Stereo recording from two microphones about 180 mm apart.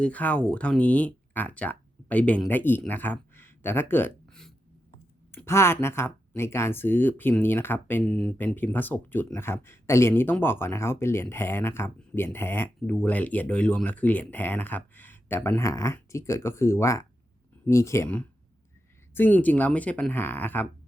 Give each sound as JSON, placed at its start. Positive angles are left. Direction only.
{"t": 0.0, "sound": "speech", "side_deg": 10}
{"t": 5.3, "sound": "speech", "side_deg": 15}